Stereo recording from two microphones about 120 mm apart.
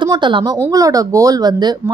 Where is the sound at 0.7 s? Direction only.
30° right (ahead or behind).